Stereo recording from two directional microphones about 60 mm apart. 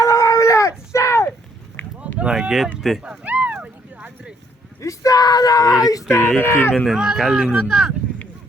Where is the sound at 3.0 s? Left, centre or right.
Right.